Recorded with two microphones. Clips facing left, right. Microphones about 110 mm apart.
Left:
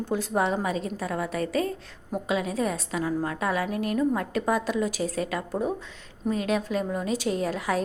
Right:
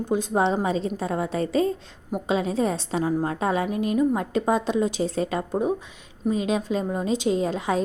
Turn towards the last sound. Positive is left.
turn(degrees=-20)  # may be behind; listen again after turning